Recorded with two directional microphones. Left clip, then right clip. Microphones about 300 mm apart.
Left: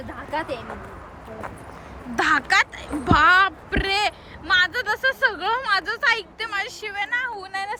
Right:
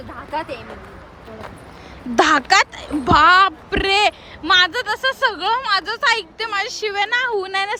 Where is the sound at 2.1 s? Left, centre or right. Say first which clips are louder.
Right 5 dB; centre.